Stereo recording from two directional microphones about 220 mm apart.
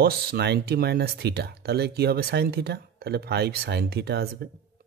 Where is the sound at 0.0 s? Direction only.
45° right (ahead or behind).